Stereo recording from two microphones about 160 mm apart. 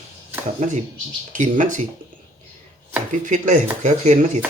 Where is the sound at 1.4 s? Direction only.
50° right (ahead or behind).